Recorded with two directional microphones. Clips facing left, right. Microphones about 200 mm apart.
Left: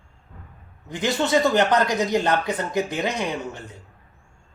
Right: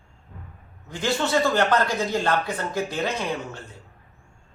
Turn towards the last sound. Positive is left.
turn(degrees=15)  # may be behind; listen again after turning